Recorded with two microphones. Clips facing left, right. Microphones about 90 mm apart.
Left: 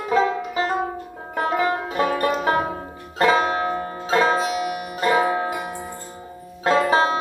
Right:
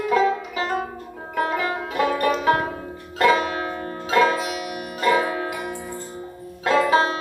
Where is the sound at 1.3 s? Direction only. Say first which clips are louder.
Left 2 dB; 30° left (ahead or behind).